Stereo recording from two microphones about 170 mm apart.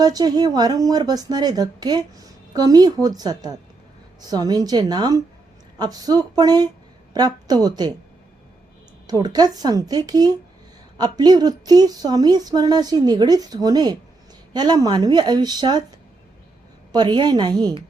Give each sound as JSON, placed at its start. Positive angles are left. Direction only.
{"t": 0.0, "sound": "a woman's voice", "side_deg": -25}
{"t": 9.0, "sound": "a woman's voice", "side_deg": -25}
{"t": 16.9, "sound": "a woman's voice", "side_deg": -25}